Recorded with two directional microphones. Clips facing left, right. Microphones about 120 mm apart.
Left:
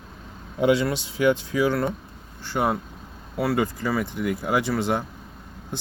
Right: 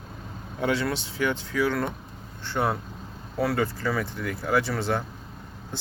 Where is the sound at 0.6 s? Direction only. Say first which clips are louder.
Left 5 dB; 15° left (ahead or behind).